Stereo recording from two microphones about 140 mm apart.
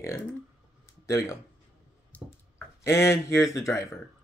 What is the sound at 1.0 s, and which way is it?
Speech, 20° left (ahead or behind).